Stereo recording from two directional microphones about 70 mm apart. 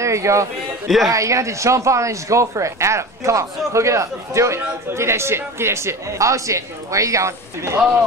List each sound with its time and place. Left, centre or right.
0.0 s speech: right
0.8 s a man's voice: centre
1.1 s speech: right